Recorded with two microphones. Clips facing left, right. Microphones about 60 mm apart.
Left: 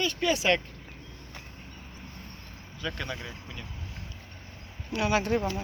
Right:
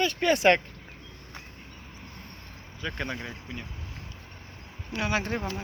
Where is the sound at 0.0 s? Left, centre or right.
Right.